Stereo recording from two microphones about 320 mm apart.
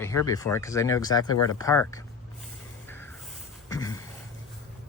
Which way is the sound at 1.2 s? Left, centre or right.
Left.